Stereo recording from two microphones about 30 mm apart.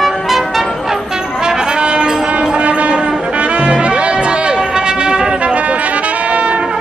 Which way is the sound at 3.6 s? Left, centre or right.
Right.